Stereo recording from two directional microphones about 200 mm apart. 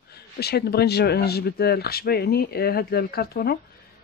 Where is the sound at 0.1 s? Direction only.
55° left (ahead or behind).